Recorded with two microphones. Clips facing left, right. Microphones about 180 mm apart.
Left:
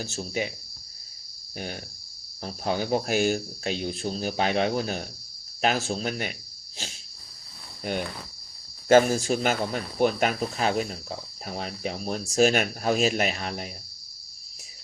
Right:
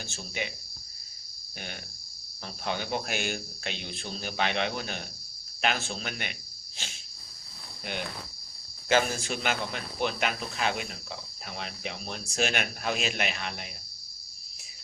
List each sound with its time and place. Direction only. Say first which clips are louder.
0.0 s speech: left 7 dB; 40° left (ahead or behind)
1.5 s speech: left 7 dB; 35° left (ahead or behind)
8.9 s speech: left 8 dB; 45° left (ahead or behind)